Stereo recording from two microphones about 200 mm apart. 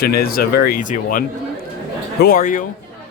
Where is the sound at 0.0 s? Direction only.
50° left (ahead or behind).